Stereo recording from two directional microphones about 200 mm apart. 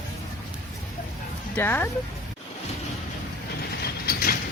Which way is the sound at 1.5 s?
10° left (ahead or behind).